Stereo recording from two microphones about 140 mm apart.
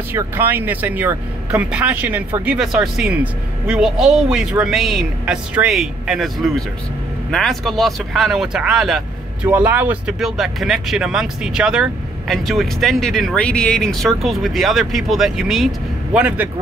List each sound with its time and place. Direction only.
0.1 s speech: 15° right (ahead or behind)
9.5 s speech: 10° right (ahead or behind)